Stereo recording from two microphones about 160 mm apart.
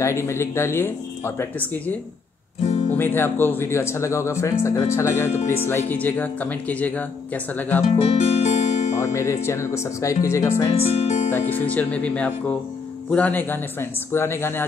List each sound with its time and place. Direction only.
0.0 s speech: 15° left (ahead or behind)
3.0 s speech: 15° left (ahead or behind)
8.1 s music: 40° left (ahead or behind)
9.1 s speech: 15° left (ahead or behind)
10.8 s speech: 40° left (ahead or behind)
11.3 s speech: 10° left (ahead or behind)